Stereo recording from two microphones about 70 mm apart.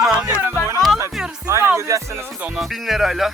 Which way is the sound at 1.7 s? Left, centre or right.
Right.